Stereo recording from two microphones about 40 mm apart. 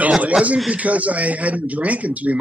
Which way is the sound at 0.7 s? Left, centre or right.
Right.